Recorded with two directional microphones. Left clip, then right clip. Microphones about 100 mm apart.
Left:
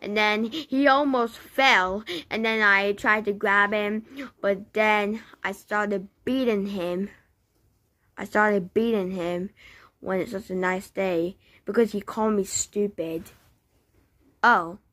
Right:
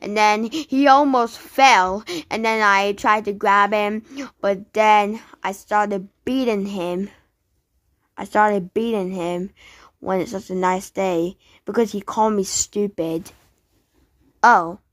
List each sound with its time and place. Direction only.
0.0 s a woman's voice: 45° right (ahead or behind)
12.4 s speech: 60° right (ahead or behind)
14.4 s a woman's voice: 25° right (ahead or behind)